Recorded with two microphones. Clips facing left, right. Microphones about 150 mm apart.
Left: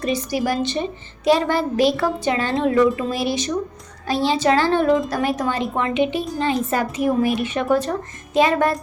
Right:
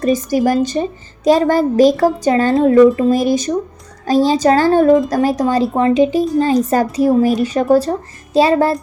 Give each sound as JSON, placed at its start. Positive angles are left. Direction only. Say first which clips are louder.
{"t": 0.0, "sound": "a woman's voice", "louder": "right 7 dB", "side_deg": -45}